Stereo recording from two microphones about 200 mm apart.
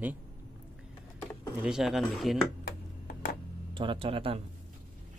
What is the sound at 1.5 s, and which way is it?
Speech, 5° right (ahead or behind).